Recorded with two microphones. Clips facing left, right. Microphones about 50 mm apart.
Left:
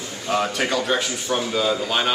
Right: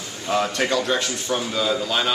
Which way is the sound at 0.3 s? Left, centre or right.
Centre.